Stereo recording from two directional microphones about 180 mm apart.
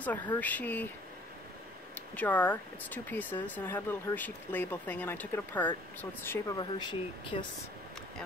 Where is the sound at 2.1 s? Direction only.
10° left (ahead or behind).